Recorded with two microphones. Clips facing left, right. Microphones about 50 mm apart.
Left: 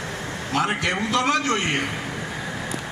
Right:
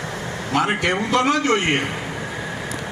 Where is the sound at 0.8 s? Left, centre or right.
Right.